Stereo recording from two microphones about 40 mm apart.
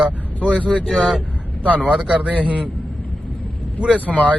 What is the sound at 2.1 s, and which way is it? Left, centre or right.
Speech, right.